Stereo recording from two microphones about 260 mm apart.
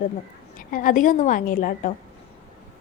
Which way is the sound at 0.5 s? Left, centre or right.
Left.